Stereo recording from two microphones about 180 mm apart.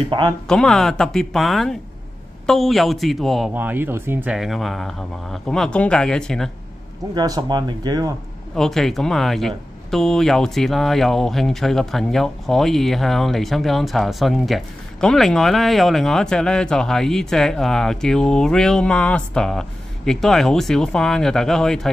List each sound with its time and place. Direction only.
0.5 s speech: 5° left (ahead or behind)
3.5 s speech: 10° right (ahead or behind)
7.2 s speech: 20° right (ahead or behind)
8.5 s speech: centre (ahead or behind)